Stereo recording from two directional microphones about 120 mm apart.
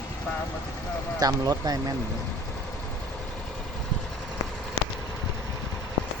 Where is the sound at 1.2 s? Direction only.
30° right (ahead or behind).